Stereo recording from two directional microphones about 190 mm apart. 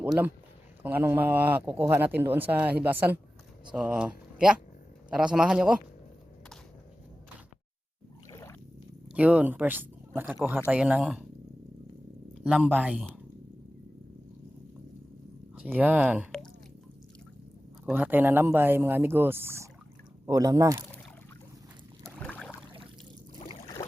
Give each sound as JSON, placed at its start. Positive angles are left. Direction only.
{"t": 0.0, "sound": "speech", "side_deg": -10}
{"t": 8.3, "sound": "boat", "side_deg": 15}
{"t": 9.1, "sound": "speech", "side_deg": -5}
{"t": 12.4, "sound": "speech", "side_deg": -5}
{"t": 15.5, "sound": "speech", "side_deg": -10}
{"t": 17.8, "sound": "speech", "side_deg": -10}
{"t": 22.0, "sound": "rowboat", "side_deg": 5}
{"t": 23.3, "sound": "boat", "side_deg": 20}